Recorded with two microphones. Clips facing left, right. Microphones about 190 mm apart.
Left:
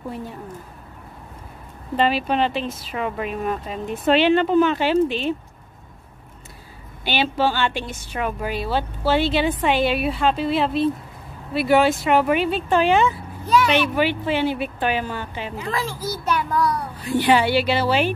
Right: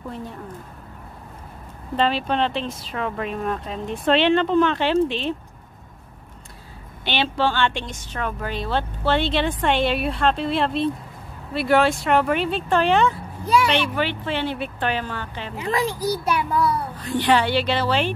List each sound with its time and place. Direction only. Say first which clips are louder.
2.0 s speech: left 1 dB; 5° left (ahead or behind)
7.1 s speech: left 1 dB; 5° left (ahead or behind)
15.5 s a child's voice: right 5 dB; 15° right (ahead or behind)
17.0 s speech: left 2 dB; 10° left (ahead or behind)